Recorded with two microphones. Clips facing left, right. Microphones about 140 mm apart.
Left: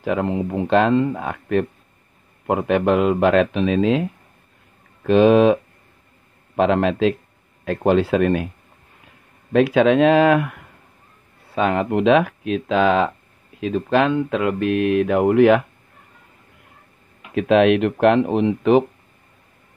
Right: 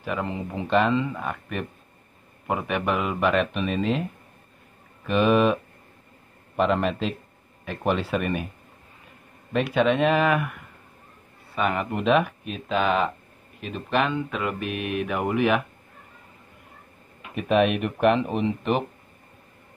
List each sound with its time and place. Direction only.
0.0 s speech: 70° left (ahead or behind)
0.9 s speech: 55° left (ahead or behind); by 1.7 s 85° left
2.4 s speech: 70° left (ahead or behind); by 4.0 s 90° left
5.0 s speech: 90° left
9.5 s speech: 90° left
11.5 s speech: 90° left
17.3 s speech: 90° left; by 18.5 s 70° left (ahead or behind)